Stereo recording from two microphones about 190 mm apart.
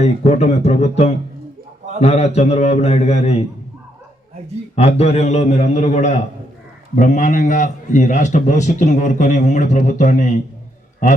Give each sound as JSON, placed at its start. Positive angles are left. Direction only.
{"t": 0.0, "sound": "a man's voice", "side_deg": 35}
{"t": 4.7, "sound": "a man's voice", "side_deg": 30}